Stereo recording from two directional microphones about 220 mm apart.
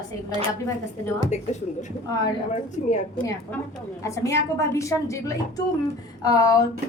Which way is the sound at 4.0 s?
15° left (ahead or behind).